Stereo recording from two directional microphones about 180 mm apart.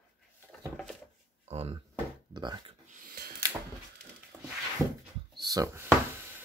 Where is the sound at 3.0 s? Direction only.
55° right (ahead or behind).